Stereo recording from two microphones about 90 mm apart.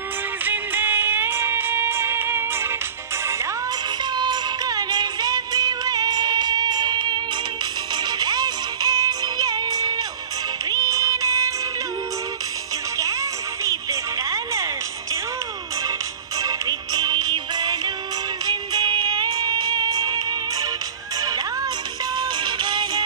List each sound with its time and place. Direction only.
0.5 s music: 20° right (ahead or behind)
4.0 s music: 55° right (ahead or behind); by 11.5 s 35° right (ahead or behind)
12.9 s music: 35° right (ahead or behind)
16.3 s music: 45° right (ahead or behind)
22.1 s music: 55° right (ahead or behind)